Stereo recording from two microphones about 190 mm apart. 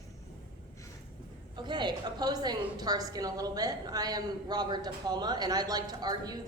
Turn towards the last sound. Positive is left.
turn(degrees=-20)  # may be behind; listen again after turning